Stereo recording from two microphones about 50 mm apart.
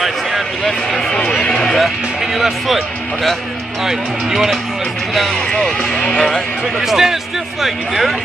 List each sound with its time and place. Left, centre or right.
0.7 s a sound: centre
2.3 s speech: centre
3.8 s speech: centre
5.8 s speech: left
6.1 s speech: centre
6.8 s speech: centre